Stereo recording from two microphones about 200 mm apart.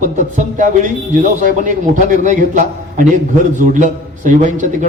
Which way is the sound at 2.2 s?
40° right (ahead or behind).